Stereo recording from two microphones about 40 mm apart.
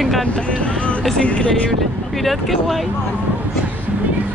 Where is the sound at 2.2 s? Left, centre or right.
Centre.